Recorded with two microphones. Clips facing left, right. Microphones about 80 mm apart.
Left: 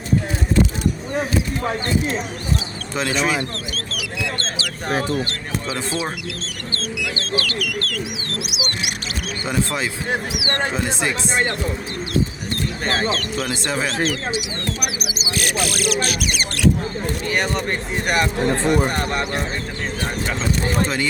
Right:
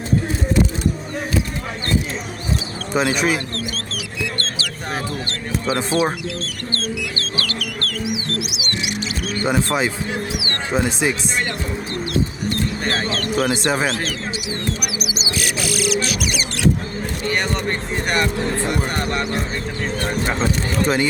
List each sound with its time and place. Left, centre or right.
2.9 s speech: centre
5.7 s speech: right
7.2 s chicken: right
10.7 s speech: centre
12.9 s speech: left
13.1 s speech: right
13.6 s speech: centre
15.3 s speech: left
17.2 s speech: centre
20.8 s speech: centre